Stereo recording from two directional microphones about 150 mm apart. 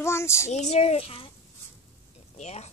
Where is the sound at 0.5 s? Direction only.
50° left (ahead or behind).